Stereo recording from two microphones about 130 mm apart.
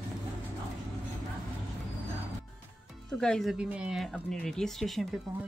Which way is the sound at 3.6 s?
10° right (ahead or behind).